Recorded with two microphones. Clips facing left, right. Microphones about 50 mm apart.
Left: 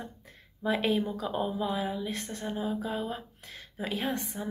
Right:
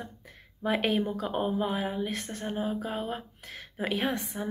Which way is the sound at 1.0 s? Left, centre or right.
Right.